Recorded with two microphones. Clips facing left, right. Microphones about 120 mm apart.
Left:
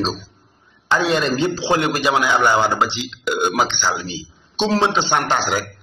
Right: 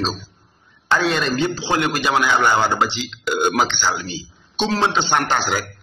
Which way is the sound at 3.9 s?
20° left (ahead or behind).